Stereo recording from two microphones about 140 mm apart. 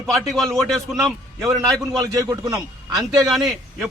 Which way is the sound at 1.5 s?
25° right (ahead or behind).